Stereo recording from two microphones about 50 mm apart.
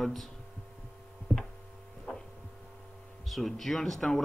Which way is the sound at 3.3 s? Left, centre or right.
Centre.